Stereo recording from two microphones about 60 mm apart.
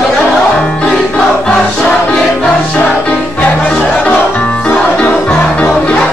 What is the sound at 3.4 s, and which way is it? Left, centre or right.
Music, centre.